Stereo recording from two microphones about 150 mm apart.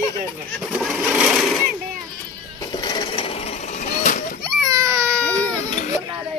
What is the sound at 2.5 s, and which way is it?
Sewing machine, 30° left (ahead or behind).